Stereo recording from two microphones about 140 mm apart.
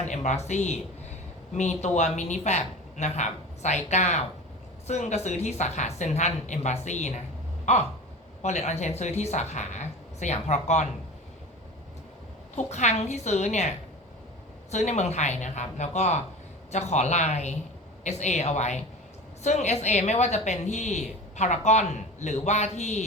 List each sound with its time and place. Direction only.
0.0 s a woman's voice: 55° left (ahead or behind)
7.6 s a sound: 55° left (ahead or behind)
8.4 s a woman's voice: 55° left (ahead or behind)
12.5 s a woman's voice: 55° left (ahead or behind)